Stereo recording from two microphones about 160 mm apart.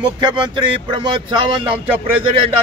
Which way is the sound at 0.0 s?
30° right (ahead or behind).